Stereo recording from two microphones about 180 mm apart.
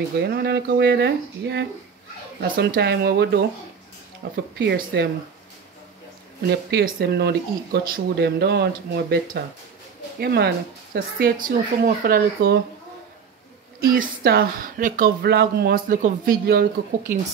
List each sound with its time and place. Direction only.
0.2 s speech: 65° right (ahead or behind)
6.4 s speech: 65° right (ahead or behind)
13.7 s speech: 55° right (ahead or behind)
15.2 s speech: 60° right (ahead or behind)